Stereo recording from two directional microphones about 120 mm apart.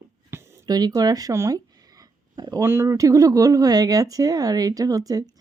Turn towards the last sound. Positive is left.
turn(degrees=-30)  # may be behind; listen again after turning